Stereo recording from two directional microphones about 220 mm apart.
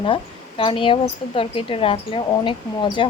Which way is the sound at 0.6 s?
25° left (ahead or behind).